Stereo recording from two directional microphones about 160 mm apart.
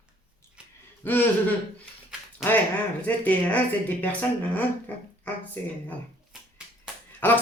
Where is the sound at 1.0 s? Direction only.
10° left (ahead or behind).